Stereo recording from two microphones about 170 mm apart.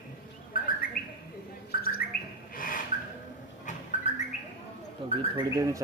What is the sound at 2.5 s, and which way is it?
Rub, 55° left (ahead or behind).